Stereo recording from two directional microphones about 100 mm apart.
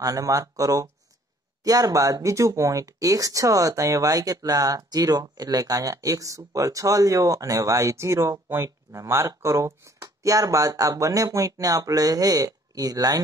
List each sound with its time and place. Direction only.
0.0 s speech: 35° right (ahead or behind)